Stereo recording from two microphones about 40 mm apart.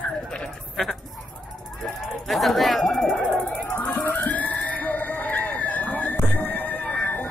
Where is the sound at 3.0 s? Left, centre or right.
Left.